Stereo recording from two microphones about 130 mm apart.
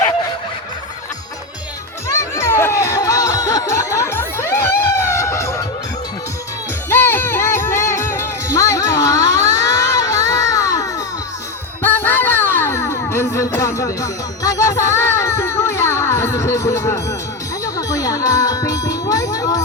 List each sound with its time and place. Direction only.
2.0 s music: 20° left (ahead or behind)
6.9 s music: 15° left (ahead or behind)
11.8 s music: 15° left (ahead or behind)
17.7 s jingle bell: 25° left (ahead or behind)